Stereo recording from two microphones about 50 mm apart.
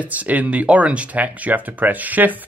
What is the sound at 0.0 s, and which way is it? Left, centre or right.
Speech, right.